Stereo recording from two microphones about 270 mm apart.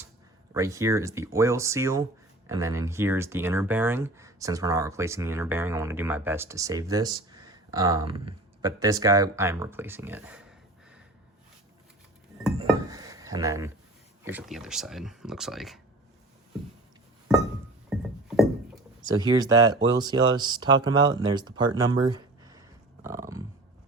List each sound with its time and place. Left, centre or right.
0.5 s speech: centre
12.5 s dishes: centre
14.3 s speech: centre
17.9 s music: centre
19.0 s speech: centre